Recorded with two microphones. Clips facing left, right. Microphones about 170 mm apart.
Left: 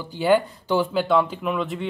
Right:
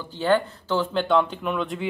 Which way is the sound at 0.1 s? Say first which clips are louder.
Left 2 dB; 10° left (ahead or behind).